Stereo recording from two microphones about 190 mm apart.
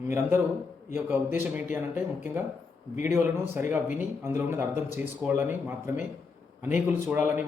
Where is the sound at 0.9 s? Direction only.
10° right (ahead or behind).